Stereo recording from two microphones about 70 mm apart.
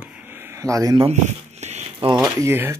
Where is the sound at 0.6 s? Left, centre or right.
Right.